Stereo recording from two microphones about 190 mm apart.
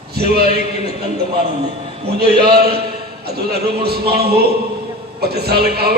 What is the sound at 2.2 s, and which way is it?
A man's voice, 55° right (ahead or behind).